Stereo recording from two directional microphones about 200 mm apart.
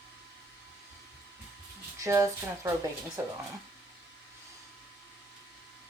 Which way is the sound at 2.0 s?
15° right (ahead or behind).